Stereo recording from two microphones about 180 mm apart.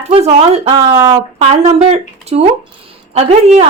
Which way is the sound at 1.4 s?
35° right (ahead or behind).